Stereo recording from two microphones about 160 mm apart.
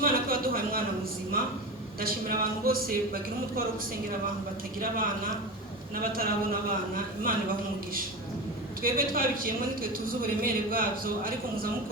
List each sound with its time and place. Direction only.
0.0 s a sound: 65° right (ahead or behind)
2.0 s speech: 65° right (ahead or behind)
4.8 s a man's voice: 65° right (ahead or behind)
8.8 s a man's voice: 65° right (ahead or behind)